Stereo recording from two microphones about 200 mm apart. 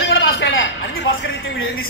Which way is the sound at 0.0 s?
70° left (ahead or behind).